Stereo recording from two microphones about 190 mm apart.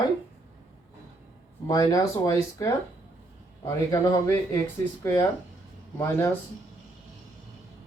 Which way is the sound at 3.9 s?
20° left (ahead or behind).